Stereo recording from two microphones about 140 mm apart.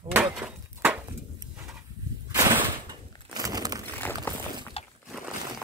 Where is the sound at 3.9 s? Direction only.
15° left (ahead or behind).